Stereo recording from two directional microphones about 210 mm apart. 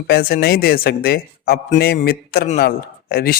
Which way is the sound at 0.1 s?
45° left (ahead or behind).